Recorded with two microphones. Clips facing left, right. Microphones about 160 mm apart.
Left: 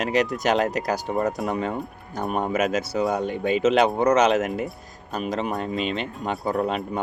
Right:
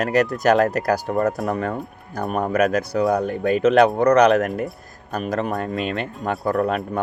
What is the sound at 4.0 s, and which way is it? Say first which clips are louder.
Speech: right 4 dB; 60° right (ahead or behind).